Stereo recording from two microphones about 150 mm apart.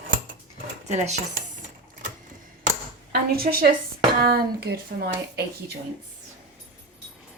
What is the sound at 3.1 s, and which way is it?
Speech, 90° right.